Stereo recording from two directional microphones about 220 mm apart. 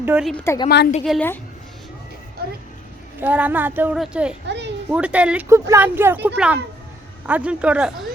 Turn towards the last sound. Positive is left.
turn(degrees=-5)  # may be behind; listen again after turning